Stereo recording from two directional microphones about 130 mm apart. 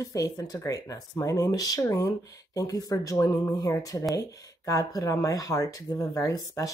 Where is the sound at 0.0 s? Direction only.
25° left (ahead or behind).